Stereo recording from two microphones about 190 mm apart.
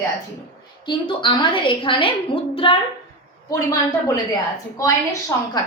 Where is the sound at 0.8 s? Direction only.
25° left (ahead or behind).